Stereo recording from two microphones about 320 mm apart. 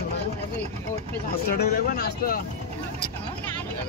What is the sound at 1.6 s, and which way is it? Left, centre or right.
Speech, left.